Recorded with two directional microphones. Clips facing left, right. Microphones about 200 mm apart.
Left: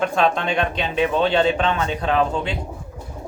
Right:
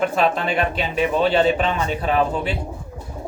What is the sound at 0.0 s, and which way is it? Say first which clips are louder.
Speech: even; 5° right (ahead or behind).